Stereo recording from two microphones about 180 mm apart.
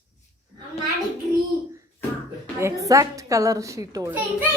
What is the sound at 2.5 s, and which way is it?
A woman's voice, 15° right (ahead or behind).